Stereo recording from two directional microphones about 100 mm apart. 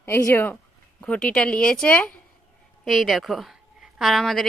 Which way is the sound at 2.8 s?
Centre (ahead or behind).